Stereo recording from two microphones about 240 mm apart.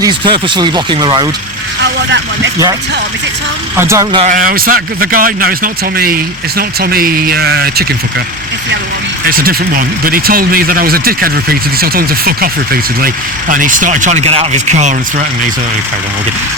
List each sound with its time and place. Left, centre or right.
0.0 s speech: centre
1.8 s speech: right
3.8 s speech: centre
4.2 s speech: right
9.3 s speech: right